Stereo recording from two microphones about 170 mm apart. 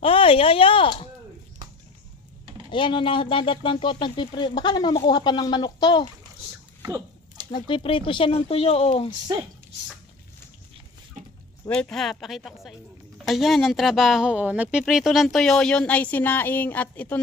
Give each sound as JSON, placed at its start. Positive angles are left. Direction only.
{"t": 0.0, "sound": "speech", "side_deg": 35}
{"t": 2.6, "sound": "speech", "side_deg": 30}
{"t": 6.8, "sound": "dog", "side_deg": -20}
{"t": 7.5, "sound": "speech", "side_deg": 30}
{"t": 11.7, "sound": "a woman's voice", "side_deg": 5}